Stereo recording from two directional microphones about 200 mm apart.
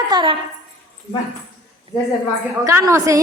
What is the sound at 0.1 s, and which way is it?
Speech, 25° right (ahead or behind).